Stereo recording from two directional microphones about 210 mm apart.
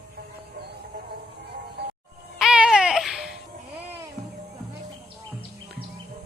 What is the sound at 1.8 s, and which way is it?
Music, 55° right (ahead or behind).